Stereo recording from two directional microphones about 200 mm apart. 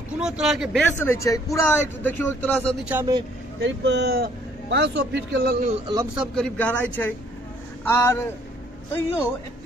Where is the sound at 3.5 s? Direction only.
60° right (ahead or behind).